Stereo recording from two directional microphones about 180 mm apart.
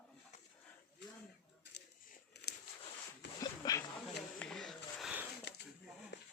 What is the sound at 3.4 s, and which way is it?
Dog, 20° left (ahead or behind).